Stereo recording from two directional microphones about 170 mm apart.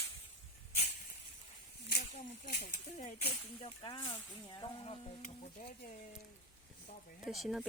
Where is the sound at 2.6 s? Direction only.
35° left (ahead or behind).